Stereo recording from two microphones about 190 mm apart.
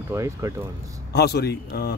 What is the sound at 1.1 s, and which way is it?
Speech, 55° left (ahead or behind).